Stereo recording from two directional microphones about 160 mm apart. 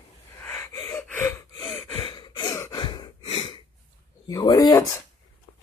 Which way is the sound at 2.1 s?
30° left (ahead or behind).